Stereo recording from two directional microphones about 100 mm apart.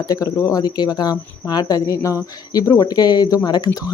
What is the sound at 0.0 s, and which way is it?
Speech, 35° left (ahead or behind).